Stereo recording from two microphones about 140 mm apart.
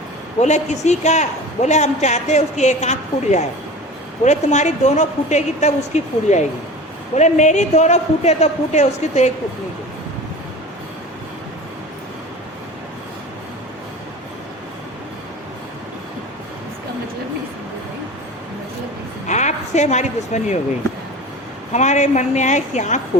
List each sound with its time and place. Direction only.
0.3 s a man's voice: 55° left (ahead or behind)
19.3 s a woman's voice: 55° left (ahead or behind)
21.7 s a man's voice: 55° left (ahead or behind)